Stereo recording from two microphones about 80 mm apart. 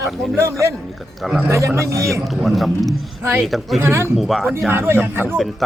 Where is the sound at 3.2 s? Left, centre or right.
Right.